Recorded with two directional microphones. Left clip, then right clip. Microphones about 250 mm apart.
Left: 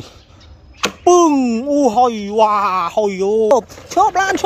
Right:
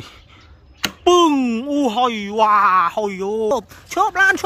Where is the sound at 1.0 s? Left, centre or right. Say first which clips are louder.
Left 2 dB; centre.